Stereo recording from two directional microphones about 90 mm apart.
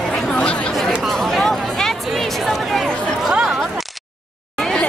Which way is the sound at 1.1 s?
5° left (ahead or behind).